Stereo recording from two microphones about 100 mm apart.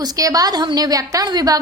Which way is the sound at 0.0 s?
35° right (ahead or behind).